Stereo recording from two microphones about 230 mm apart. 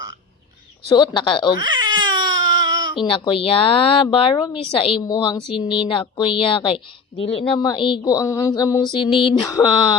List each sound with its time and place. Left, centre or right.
0.9 s a woman's voice: centre
1.5 s baby cry: centre
3.0 s a woman's voice: left
5.5 s speech: centre
5.9 s a woman's voice: left
9.0 s speech: centre
9.3 s speech: centre